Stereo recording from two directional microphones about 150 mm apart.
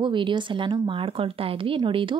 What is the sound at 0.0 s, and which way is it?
Speech, 30° right (ahead or behind).